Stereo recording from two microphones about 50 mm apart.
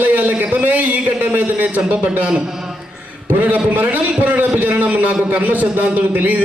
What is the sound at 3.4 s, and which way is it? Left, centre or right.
A man's voice, right.